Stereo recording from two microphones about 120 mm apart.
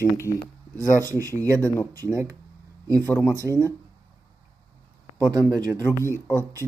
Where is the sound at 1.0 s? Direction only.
30° right (ahead or behind).